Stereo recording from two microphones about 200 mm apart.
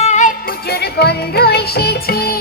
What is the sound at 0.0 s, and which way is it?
Music, 35° left (ahead or behind).